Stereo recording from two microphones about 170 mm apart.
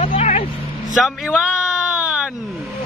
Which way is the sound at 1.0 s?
5° right (ahead or behind).